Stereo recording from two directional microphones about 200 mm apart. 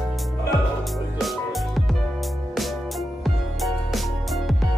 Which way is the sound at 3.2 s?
Centre (ahead or behind).